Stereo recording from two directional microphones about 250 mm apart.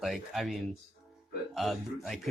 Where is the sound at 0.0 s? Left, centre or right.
Centre.